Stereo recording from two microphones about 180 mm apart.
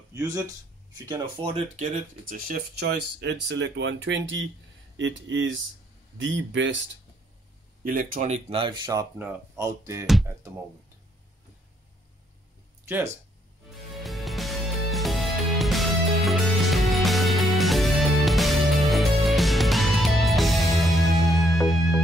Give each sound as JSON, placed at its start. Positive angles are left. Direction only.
{"t": 0.1, "sound": "speech", "side_deg": -20}
{"t": 1.4, "sound": "speech", "side_deg": -35}
{"t": 2.2, "sound": "speech", "side_deg": -55}
{"t": 7.8, "sound": "speech", "side_deg": -50}
{"t": 12.8, "sound": "speech", "side_deg": -15}
{"t": 13.7, "sound": "music", "side_deg": 0}